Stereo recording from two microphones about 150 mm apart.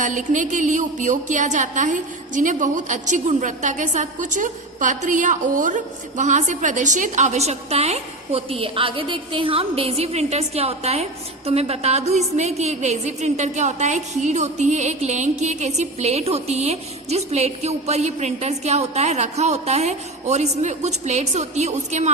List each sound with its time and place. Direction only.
0.0 s a woman's voice: 55° right (ahead or behind)